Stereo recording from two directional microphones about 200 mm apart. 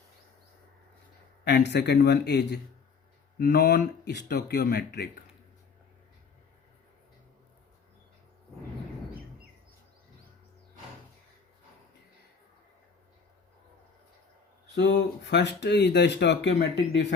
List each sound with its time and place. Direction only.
1.5 s speech: 55° left (ahead or behind)
3.3 s mantra: 50° left (ahead or behind)
14.8 s speech: 60° left (ahead or behind)